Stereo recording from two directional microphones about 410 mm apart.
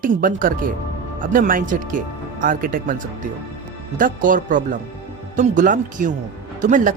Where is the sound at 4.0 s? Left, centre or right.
Centre.